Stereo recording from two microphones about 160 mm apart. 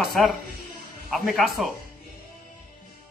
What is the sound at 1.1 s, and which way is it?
Speech, centre (ahead or behind).